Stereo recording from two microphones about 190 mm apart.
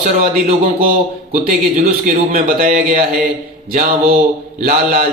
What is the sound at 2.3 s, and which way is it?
Speech, 45° right (ahead or behind).